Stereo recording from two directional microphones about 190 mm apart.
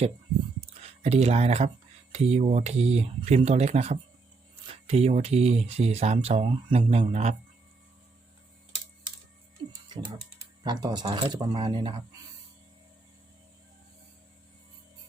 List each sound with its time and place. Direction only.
0.7 s speech: 35° right (ahead or behind)
9.9 s speech: 20° right (ahead or behind)